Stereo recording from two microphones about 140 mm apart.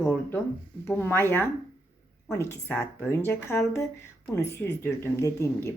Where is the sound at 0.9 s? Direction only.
15° left (ahead or behind).